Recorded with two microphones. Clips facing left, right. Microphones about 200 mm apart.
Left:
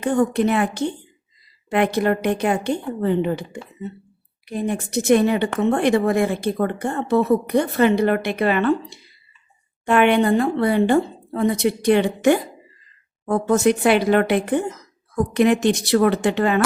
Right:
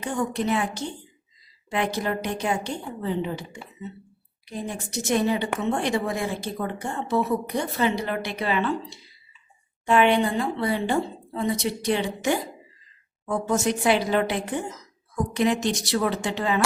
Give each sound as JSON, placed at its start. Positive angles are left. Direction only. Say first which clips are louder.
{"t": 0.0, "sound": "a woman's voice", "louder": "left 8 dB", "side_deg": 60}